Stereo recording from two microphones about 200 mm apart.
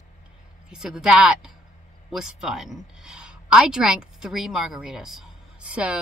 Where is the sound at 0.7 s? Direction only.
Centre (ahead or behind).